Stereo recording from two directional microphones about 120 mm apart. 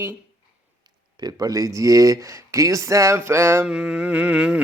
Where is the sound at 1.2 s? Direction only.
30° right (ahead or behind).